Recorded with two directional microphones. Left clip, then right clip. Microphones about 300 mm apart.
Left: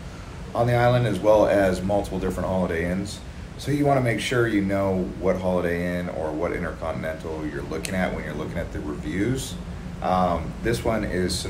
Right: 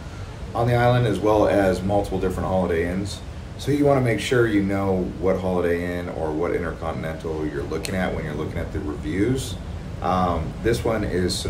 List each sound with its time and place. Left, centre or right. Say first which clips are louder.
0.6 s speech: even; centre
9.1 s speech: right 4 dB; centre